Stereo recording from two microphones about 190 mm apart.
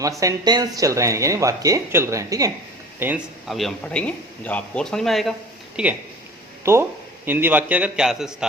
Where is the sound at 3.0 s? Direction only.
5° right (ahead or behind).